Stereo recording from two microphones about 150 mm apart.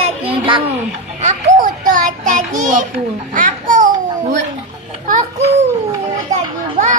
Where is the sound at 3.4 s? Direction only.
60° right (ahead or behind).